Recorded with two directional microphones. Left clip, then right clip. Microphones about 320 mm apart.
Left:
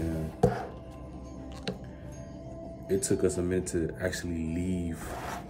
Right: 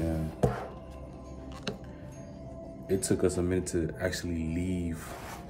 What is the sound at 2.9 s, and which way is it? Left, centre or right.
Speech, centre.